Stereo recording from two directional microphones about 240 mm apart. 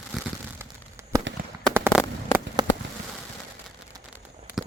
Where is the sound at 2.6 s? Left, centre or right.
Centre.